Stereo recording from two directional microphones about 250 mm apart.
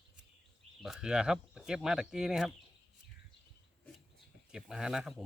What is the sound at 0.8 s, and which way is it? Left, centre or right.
Speech, centre.